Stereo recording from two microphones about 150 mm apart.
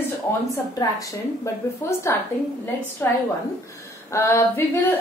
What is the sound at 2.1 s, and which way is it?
A woman's voice, 15° left (ahead or behind).